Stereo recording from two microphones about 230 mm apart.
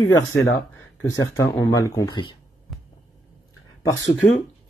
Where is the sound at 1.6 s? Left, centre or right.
Centre.